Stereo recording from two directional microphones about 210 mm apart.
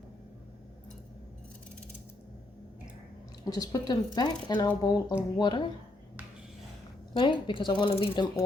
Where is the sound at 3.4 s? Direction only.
15° left (ahead or behind).